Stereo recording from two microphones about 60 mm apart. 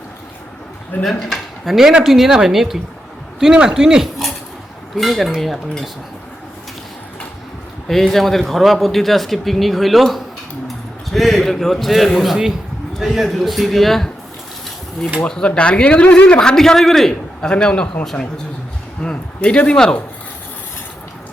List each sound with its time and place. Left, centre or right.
1.0 s speech: centre
4.9 s speech: centre
7.9 s speech: centre
15.3 s a man's voice: centre
19.0 s a man's voice: centre